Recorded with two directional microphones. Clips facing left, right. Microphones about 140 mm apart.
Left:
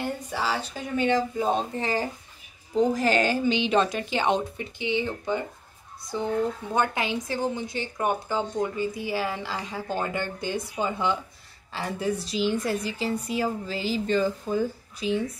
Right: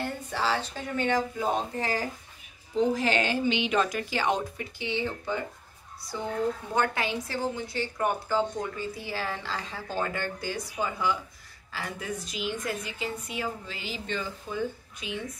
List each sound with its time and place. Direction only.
0.0 s speech: 10° left (ahead or behind)
2.9 s a woman's voice: 40° left (ahead or behind)